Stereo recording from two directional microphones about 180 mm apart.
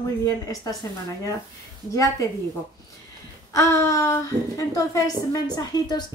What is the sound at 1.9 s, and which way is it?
Speech, 20° left (ahead or behind).